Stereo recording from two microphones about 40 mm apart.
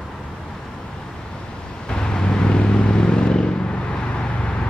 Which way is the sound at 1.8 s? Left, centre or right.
Centre.